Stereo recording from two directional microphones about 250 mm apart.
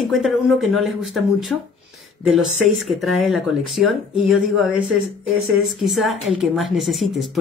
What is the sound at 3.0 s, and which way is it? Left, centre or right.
A woman's voice, centre.